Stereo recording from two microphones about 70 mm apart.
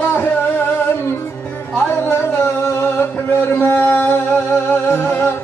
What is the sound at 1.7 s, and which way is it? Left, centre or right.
Music, left.